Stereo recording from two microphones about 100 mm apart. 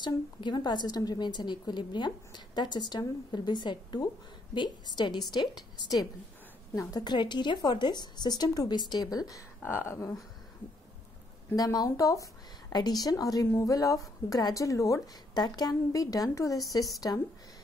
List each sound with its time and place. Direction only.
0.0 s a woman's voice: 50° left (ahead or behind)
6.9 s a woman's voice: 45° left (ahead or behind)
9.6 s speech: 25° left (ahead or behind)
11.5 s a woman's voice: 40° left (ahead or behind)